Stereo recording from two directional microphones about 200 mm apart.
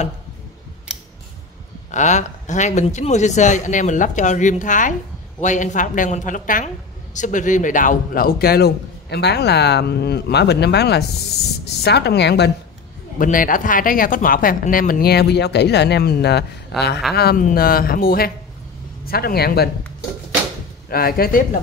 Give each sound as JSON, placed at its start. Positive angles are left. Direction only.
{"t": 1.9, "sound": "a man's voice", "side_deg": 35}
{"t": 13.2, "sound": "a man's voice", "side_deg": 40}
{"t": 20.9, "sound": "a man's voice", "side_deg": 50}